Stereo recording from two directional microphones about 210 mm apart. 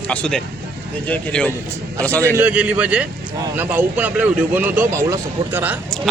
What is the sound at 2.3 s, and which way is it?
Speech, 5° right (ahead or behind).